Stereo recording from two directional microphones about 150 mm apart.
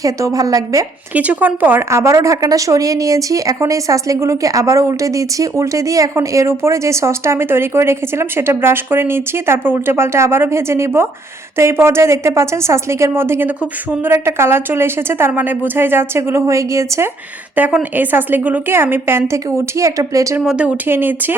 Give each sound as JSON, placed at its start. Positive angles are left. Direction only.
{"t": 0.0, "sound": "a woman's voice", "side_deg": -20}
{"t": 1.1, "sound": "a woman's voice", "side_deg": -10}
{"t": 17.5, "sound": "a woman's voice", "side_deg": -10}
{"t": 20.4, "sound": "a woman's voice", "side_deg": -5}